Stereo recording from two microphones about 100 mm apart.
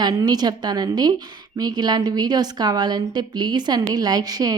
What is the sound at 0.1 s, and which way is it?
A woman's voice, 40° right (ahead or behind).